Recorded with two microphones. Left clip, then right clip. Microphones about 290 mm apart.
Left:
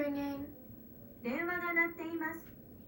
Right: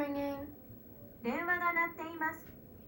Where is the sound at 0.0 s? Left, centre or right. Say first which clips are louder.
Even; right.